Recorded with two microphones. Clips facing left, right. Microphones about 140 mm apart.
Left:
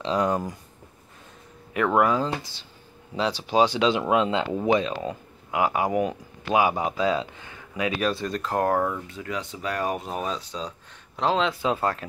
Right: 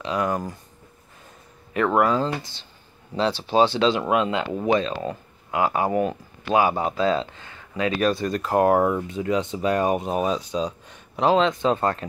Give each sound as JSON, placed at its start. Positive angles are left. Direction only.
{"t": 0.0, "sound": "speech", "side_deg": 25}
{"t": 2.0, "sound": "speech", "side_deg": 15}
{"t": 2.2, "sound": "speech", "side_deg": 5}
{"t": 11.4, "sound": "speech", "side_deg": 5}